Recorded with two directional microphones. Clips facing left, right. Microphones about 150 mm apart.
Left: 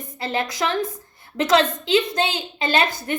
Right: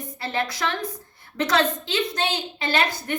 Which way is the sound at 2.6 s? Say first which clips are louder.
Left 3 dB; 20° left (ahead or behind).